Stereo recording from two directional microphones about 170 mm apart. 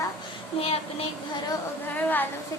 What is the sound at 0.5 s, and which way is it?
Speech, 35° left (ahead or behind).